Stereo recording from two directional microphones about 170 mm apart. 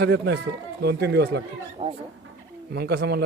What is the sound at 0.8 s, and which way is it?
Speech, 75° right (ahead or behind).